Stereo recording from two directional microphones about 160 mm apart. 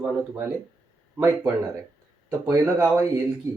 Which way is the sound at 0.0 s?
10° right (ahead or behind).